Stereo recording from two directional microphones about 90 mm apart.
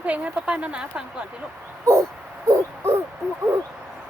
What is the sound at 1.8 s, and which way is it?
Owl, 35° right (ahead or behind).